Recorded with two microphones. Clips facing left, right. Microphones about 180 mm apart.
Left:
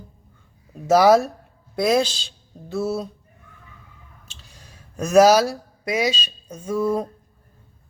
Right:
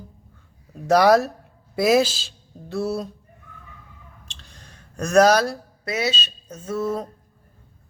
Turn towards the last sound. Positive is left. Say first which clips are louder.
# left 3 dB
turn(degrees=10)  # may be behind; listen again after turning